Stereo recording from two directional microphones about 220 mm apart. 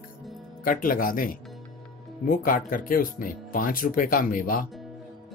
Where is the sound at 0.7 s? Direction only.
40° left (ahead or behind).